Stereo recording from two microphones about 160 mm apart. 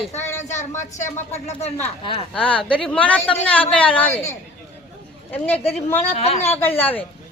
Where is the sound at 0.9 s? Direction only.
45° left (ahead or behind).